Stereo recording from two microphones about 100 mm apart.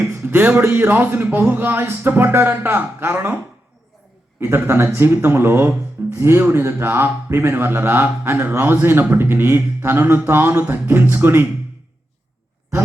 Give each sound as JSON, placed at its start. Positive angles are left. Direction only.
{"t": 0.0, "sound": "speech", "side_deg": -25}
{"t": 4.4, "sound": "speech", "side_deg": -25}